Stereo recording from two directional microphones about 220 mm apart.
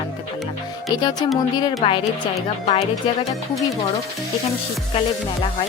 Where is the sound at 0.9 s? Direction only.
20° left (ahead or behind).